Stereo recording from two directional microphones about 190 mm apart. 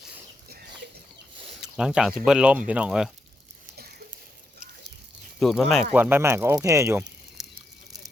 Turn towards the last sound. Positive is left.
turn(degrees=-5)  # may be behind; listen again after turning